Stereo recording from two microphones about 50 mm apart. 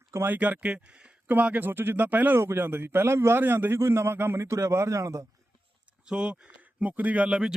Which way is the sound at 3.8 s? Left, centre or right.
Right.